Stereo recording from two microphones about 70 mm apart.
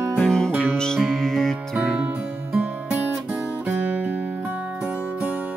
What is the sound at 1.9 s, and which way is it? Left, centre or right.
Music, right.